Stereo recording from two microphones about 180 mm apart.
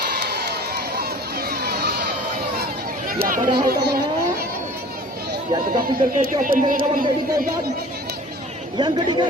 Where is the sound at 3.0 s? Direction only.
50° right (ahead or behind).